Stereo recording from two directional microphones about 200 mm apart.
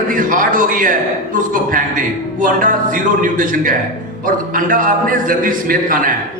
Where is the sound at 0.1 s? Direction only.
40° right (ahead or behind).